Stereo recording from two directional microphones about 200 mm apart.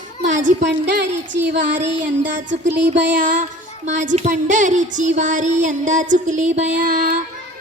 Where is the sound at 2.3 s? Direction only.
40° right (ahead or behind).